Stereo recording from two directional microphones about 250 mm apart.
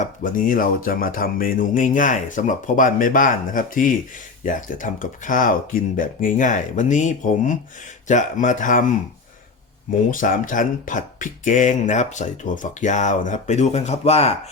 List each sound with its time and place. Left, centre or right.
0.0 s speech: left
10.1 s speech: left